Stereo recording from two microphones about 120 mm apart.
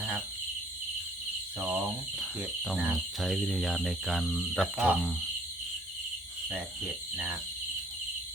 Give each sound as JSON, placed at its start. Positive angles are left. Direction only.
{"t": 1.5, "sound": "cricket", "side_deg": -10}
{"t": 6.5, "sound": "speech", "side_deg": -10}